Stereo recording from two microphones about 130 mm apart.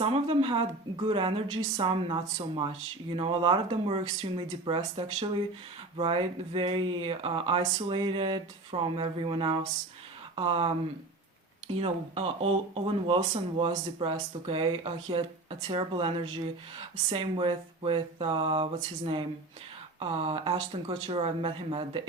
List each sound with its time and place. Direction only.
0.0 s speech: 50° right (ahead or behind)
11.8 s speech: 55° right (ahead or behind)